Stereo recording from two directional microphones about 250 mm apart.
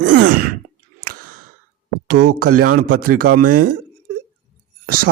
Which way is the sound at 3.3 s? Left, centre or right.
Right.